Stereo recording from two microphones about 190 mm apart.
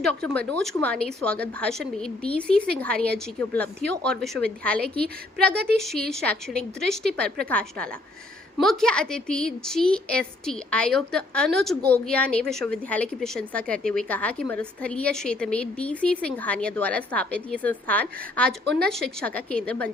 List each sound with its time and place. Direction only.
0.0 s a woman's voice: 5° left (ahead or behind)